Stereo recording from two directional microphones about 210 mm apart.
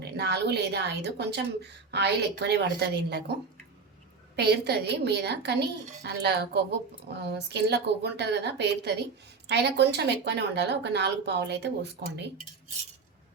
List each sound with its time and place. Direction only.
0.0 s a woman's voice: 50° right (ahead or behind)
4.4 s a woman's voice: 50° right (ahead or behind)